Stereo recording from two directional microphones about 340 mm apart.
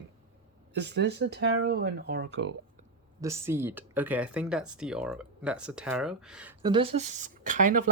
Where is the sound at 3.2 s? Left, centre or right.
Centre.